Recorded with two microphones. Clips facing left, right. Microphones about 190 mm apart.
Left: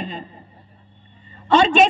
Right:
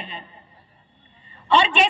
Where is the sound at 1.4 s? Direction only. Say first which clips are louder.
Left 5 dB; 45° left (ahead or behind).